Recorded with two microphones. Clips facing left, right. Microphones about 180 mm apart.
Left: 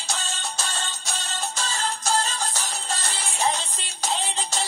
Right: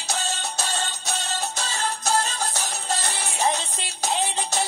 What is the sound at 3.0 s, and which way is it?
Music, 55° right (ahead or behind).